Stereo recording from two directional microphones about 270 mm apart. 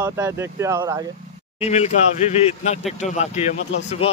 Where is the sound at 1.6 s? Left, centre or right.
Left.